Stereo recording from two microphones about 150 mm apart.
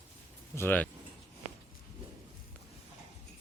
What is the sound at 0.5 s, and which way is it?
Speech, 15° left (ahead or behind).